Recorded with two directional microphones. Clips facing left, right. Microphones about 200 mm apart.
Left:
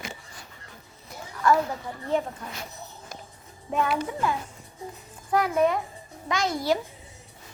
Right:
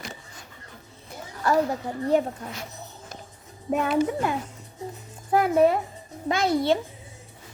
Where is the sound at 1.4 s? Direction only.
35° right (ahead or behind).